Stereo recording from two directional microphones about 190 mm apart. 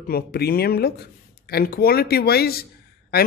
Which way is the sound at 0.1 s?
55° left (ahead or behind).